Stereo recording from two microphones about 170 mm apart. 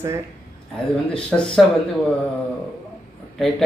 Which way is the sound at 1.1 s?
5° left (ahead or behind).